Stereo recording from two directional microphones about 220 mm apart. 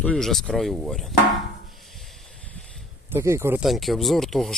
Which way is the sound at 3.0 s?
10° right (ahead or behind).